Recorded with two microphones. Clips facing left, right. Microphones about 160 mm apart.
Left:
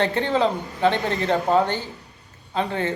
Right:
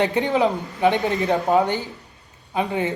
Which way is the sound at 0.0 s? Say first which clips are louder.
Right 1 dB; 15° right (ahead or behind).